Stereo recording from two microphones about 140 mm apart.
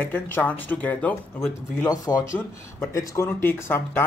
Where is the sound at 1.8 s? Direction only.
25° left (ahead or behind).